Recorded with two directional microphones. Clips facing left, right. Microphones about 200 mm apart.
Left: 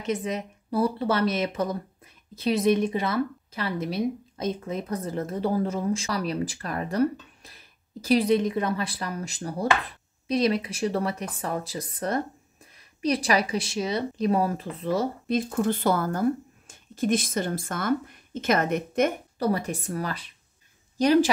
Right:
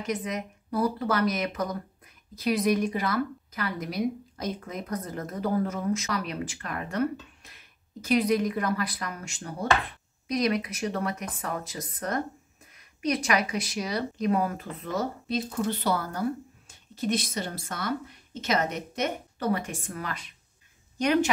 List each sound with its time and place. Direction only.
0.0 s speech: 25° left (ahead or behind)
15.2 s speech: 50° left (ahead or behind)
19.3 s speech: 35° left (ahead or behind)